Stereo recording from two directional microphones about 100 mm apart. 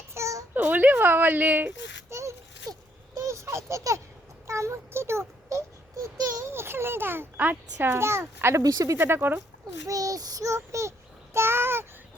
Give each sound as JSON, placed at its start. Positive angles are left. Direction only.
{"t": 0.1, "sound": "a sound", "side_deg": -30}
{"t": 0.5, "sound": "a woman's voice", "side_deg": -20}
{"t": 2.0, "sound": "a sound", "side_deg": -30}
{"t": 6.5, "sound": "a child's voice", "side_deg": -25}
{"t": 9.0, "sound": "a child's voice", "side_deg": -20}
{"t": 9.8, "sound": "child singing", "side_deg": -35}
{"t": 11.3, "sound": "babbling", "side_deg": -25}